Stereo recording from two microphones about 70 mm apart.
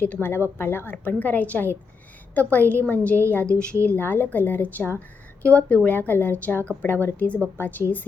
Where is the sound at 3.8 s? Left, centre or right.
Left.